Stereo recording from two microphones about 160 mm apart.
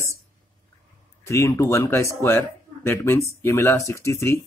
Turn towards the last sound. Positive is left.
turn(degrees=15)  # may be behind; listen again after turning